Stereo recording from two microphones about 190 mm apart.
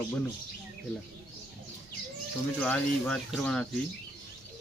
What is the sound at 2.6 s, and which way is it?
Speech, 5° left (ahead or behind).